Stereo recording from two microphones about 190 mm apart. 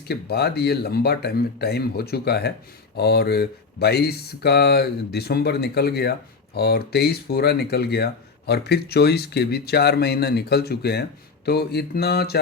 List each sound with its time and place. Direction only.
0.1 s speech: 60° left (ahead or behind)